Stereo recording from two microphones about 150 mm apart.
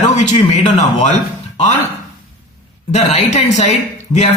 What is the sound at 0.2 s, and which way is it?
Speech, 50° left (ahead or behind).